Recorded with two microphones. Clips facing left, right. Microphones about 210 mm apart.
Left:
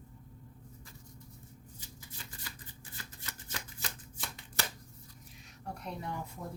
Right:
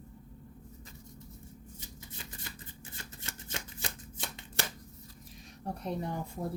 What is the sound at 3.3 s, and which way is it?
Shuffling cards, 25° right (ahead or behind).